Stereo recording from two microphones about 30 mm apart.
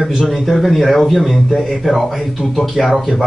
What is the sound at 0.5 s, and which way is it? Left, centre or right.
A man's voice, centre.